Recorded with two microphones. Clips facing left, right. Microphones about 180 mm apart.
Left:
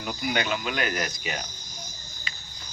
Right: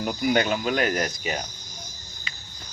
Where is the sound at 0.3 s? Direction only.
40° right (ahead or behind).